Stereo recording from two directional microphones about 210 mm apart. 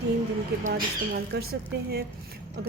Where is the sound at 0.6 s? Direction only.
45° right (ahead or behind).